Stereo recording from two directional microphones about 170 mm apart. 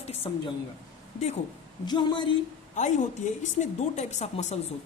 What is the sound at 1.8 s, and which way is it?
Speech, 25° left (ahead or behind).